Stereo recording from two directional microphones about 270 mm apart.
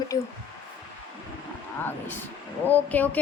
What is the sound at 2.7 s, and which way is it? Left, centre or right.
Speech, centre.